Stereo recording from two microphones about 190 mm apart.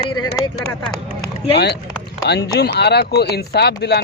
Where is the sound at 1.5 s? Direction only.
60° left (ahead or behind).